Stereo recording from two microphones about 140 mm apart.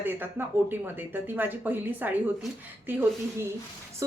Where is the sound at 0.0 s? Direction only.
15° right (ahead or behind).